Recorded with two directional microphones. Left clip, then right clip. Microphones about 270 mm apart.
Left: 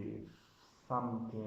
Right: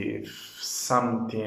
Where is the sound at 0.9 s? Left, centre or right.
Right.